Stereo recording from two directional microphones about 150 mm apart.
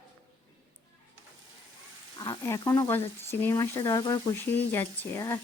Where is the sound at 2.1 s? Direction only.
25° left (ahead or behind).